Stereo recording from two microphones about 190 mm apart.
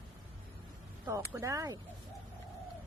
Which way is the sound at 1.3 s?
15° right (ahead or behind).